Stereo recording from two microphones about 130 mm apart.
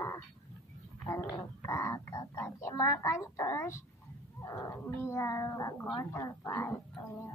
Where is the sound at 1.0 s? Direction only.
25° left (ahead or behind).